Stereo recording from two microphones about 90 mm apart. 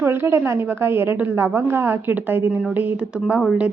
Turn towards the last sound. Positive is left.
turn(degrees=-10)  # may be behind; listen again after turning